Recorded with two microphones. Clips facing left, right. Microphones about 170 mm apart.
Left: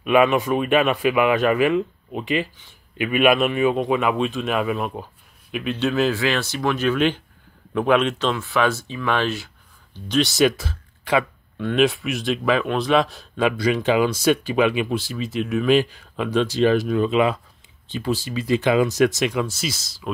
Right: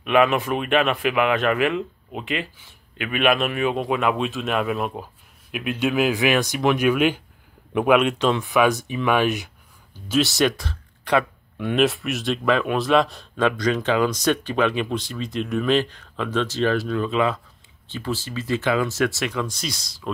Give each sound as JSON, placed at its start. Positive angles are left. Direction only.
{"t": 0.0, "sound": "a man's voice", "side_deg": 5}
{"t": 9.9, "sound": "a man's voice", "side_deg": -5}
{"t": 19.4, "sound": "a man's voice", "side_deg": 5}